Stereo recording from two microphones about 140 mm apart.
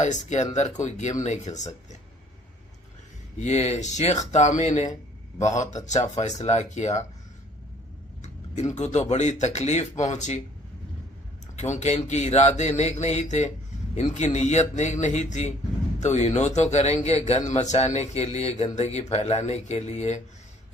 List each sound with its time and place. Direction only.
0.0 s speech: 60° left (ahead or behind)
3.3 s a man's voice: 55° left (ahead or behind)
8.2 s speech: 55° left (ahead or behind)
11.5 s a man's voice: 55° left (ahead or behind)